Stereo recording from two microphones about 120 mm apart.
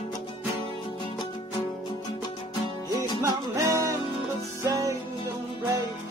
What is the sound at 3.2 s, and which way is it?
Music, 30° right (ahead or behind).